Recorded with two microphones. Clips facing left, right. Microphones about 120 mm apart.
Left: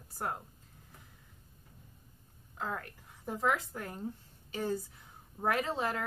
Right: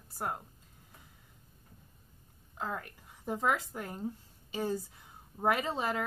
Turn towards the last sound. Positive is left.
turn(degrees=-10)  # may be behind; listen again after turning